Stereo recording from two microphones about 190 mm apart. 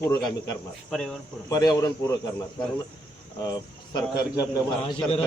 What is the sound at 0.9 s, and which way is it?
Speech, centre (ahead or behind).